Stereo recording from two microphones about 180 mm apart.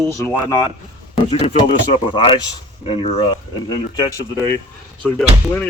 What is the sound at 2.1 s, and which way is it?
Speech, 30° left (ahead or behind).